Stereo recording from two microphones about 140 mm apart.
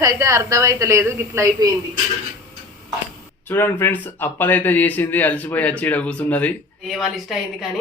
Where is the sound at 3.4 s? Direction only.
15° left (ahead or behind).